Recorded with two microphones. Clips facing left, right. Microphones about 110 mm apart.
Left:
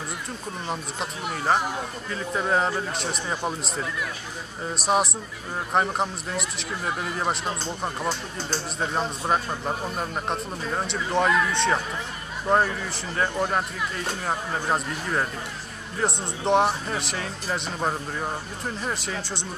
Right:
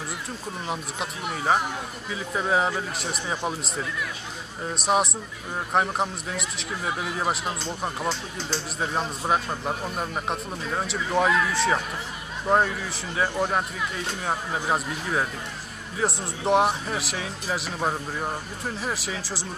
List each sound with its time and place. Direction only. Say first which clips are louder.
0.7 s a man's voice: even; centre (ahead or behind)